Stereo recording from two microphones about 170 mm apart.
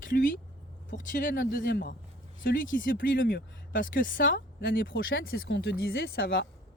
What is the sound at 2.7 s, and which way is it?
Speech, 55° left (ahead or behind).